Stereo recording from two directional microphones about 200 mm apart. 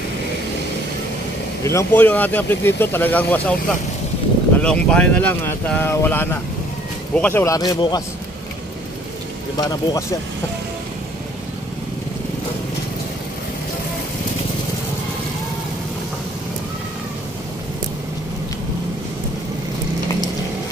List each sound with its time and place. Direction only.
1.6 s speech: 15° left (ahead or behind)
4.6 s speech: 5° left (ahead or behind)
9.6 s speech: 20° left (ahead or behind)